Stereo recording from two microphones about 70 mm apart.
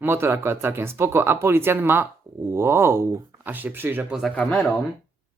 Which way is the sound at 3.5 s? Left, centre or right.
Right.